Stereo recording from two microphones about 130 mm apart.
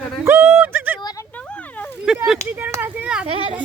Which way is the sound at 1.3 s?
10° left (ahead or behind).